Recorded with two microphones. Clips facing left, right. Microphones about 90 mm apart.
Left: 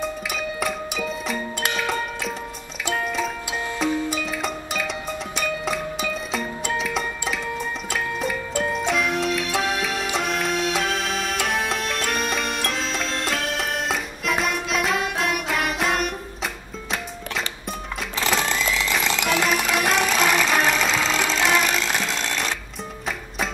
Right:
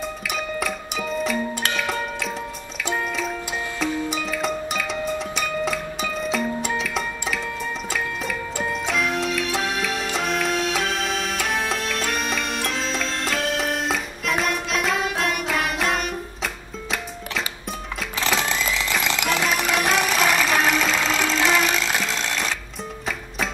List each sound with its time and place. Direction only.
0.3 s music: centre (ahead or behind)
3.8 s music: centre (ahead or behind)